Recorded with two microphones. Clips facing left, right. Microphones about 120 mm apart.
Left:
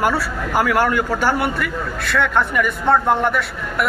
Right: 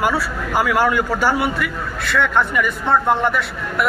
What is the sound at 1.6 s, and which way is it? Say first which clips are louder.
A man's voice: left 1 dB; 50° left (ahead or behind).